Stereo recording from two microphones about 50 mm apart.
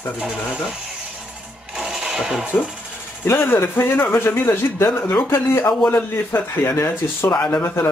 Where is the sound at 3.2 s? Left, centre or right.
Left.